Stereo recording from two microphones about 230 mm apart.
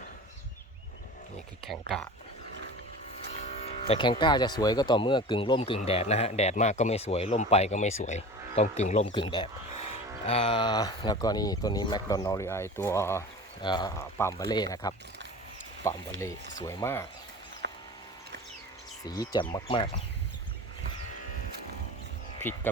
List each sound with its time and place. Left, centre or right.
3.4 s speech: left
17.6 s a sound: right
19.0 s speech: centre